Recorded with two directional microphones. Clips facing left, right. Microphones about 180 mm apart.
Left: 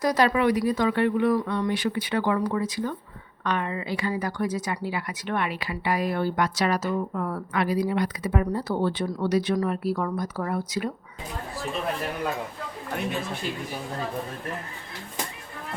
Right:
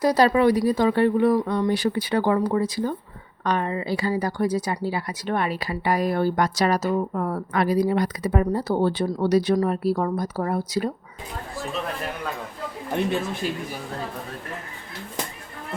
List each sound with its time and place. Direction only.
0.0 s a woman's voice: 30° right (ahead or behind)